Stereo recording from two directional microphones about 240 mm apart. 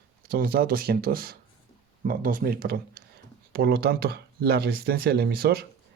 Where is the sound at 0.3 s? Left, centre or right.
Right.